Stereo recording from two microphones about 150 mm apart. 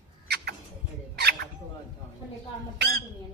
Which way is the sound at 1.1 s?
90° right.